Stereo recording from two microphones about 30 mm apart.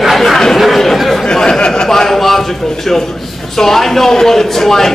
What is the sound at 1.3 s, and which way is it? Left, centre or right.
Speech, left.